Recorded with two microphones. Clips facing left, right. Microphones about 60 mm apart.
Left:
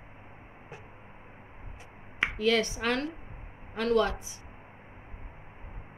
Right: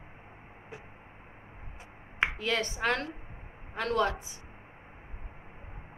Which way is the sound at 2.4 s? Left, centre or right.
Right.